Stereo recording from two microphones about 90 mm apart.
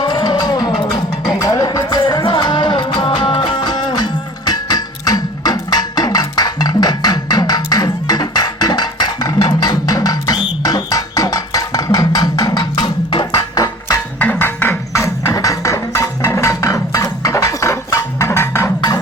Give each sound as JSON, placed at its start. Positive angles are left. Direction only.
{"t": 0.0, "sound": "music", "side_deg": 50}
{"t": 1.3, "sound": "music", "side_deg": 40}
{"t": 14.2, "sound": "music", "side_deg": 20}